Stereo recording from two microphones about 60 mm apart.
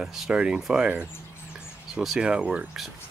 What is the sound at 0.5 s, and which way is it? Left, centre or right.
Speech, centre.